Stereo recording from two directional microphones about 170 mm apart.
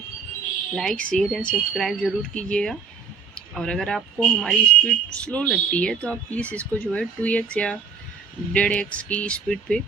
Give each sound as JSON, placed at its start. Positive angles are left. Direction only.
{"t": 0.8, "sound": "speech", "side_deg": 5}